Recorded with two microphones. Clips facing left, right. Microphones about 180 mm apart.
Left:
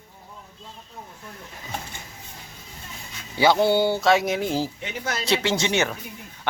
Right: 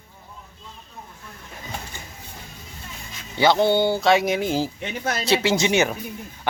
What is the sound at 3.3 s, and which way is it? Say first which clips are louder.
Speech: right 1 dB; 10° left (ahead or behind).